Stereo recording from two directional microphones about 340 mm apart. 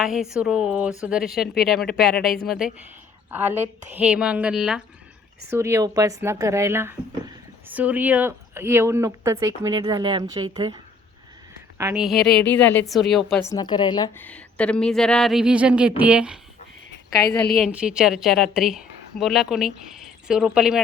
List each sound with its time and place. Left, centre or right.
0.0 s a woman's voice: centre
11.8 s a woman's voice: centre
17.5 s a woman's voice: centre